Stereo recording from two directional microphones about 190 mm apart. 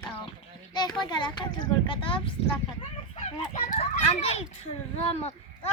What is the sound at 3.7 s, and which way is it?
A child's voice, 35° left (ahead or behind).